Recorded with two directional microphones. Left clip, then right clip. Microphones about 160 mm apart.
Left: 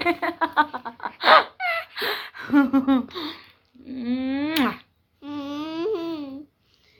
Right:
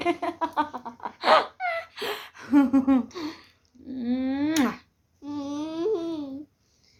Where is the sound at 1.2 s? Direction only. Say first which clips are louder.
Left 5 dB; 10° right (ahead or behind).